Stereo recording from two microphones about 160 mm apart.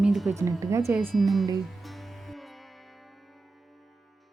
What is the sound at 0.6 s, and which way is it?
Speech, 20° right (ahead or behind).